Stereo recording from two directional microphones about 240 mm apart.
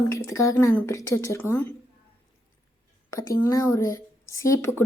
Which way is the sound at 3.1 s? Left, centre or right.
Centre.